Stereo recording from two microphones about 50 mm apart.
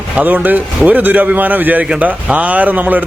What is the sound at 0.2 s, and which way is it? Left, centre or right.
Speech, right.